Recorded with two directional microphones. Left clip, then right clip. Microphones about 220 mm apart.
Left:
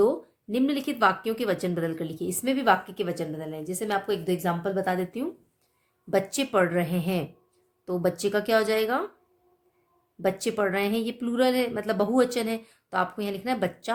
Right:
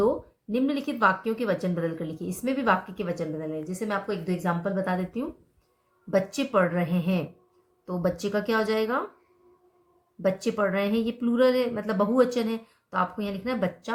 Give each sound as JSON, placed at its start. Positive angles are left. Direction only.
{"t": 0.5, "sound": "speech", "side_deg": 50}
{"t": 10.2, "sound": "speech", "side_deg": 50}